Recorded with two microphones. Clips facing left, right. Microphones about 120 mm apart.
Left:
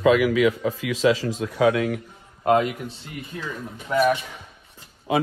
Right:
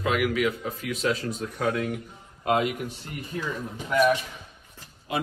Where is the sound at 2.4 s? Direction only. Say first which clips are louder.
Left 5 dB; 40° left (ahead or behind).